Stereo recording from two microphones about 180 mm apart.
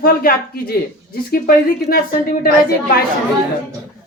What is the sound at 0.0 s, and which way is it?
A woman's voice, 55° left (ahead or behind).